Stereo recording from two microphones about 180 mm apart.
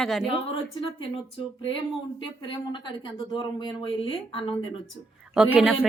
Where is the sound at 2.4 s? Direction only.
25° left (ahead or behind).